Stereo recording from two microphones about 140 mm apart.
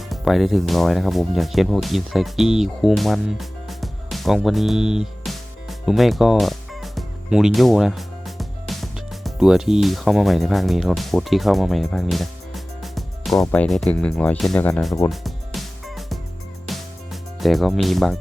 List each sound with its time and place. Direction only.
0.1 s speech: centre (ahead or behind)
15.1 s music: centre (ahead or behind)